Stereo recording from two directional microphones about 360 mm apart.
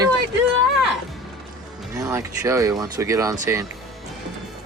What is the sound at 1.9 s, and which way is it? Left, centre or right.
Speech, centre.